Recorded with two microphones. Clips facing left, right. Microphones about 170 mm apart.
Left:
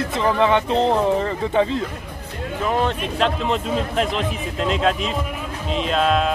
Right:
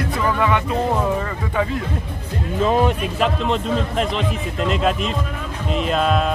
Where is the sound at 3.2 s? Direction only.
Centre (ahead or behind).